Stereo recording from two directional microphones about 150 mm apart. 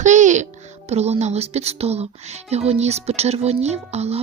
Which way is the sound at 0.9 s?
45° right (ahead or behind).